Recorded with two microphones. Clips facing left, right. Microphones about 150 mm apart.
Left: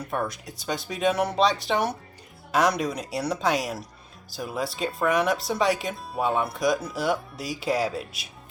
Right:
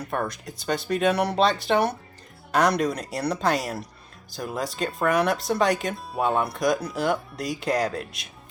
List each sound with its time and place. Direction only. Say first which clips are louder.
0.1 s speech: even; centre (ahead or behind)